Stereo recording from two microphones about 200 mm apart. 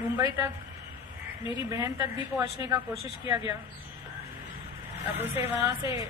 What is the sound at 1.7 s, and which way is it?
Speech, 15° right (ahead or behind).